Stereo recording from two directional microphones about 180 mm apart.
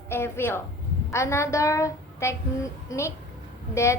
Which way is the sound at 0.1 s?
15° left (ahead or behind).